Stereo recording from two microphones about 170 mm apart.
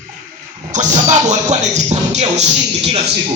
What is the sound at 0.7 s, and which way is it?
Speech, 45° right (ahead or behind).